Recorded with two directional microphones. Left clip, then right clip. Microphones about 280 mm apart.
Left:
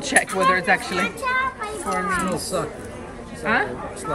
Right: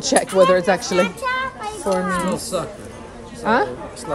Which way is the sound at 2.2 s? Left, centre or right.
Centre.